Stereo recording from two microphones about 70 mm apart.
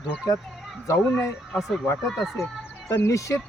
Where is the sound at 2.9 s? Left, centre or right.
Left.